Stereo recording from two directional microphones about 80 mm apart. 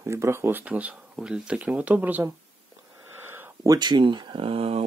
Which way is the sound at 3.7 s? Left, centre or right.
Right.